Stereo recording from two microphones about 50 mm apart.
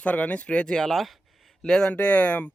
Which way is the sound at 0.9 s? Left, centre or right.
Centre.